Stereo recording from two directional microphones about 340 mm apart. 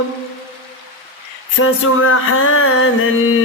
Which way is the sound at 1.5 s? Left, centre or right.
Left.